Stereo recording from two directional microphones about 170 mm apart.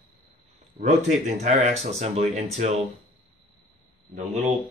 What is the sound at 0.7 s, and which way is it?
Speech, 45° right (ahead or behind).